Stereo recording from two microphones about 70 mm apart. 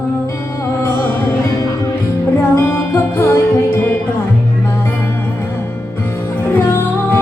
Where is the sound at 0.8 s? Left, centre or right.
Left.